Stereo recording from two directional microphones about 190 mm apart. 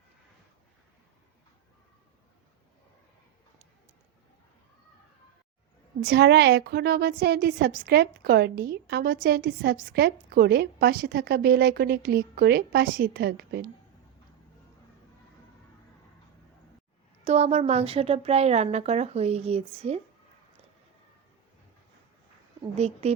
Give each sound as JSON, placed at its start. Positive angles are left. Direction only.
{"t": 6.0, "sound": "a woman's voice", "side_deg": -60}
{"t": 17.2, "sound": "a woman's voice", "side_deg": -35}
{"t": 22.8, "sound": "a woman's voice", "side_deg": -35}